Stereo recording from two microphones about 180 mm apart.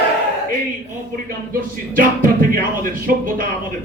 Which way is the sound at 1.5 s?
50° right (ahead or behind).